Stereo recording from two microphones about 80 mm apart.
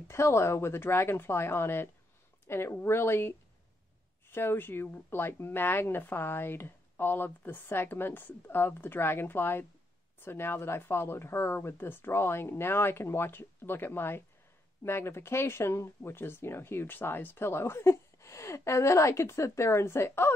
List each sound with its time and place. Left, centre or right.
0.1 s speech: left